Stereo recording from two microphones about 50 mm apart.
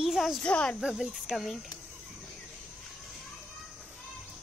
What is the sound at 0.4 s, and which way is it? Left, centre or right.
Speech, left.